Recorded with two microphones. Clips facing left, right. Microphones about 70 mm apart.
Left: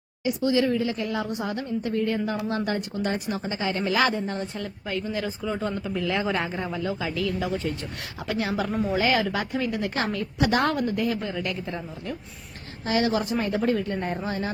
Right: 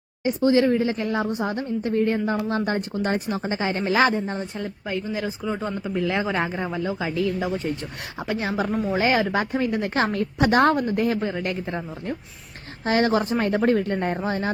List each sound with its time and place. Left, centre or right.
0.3 s a woman's voice: right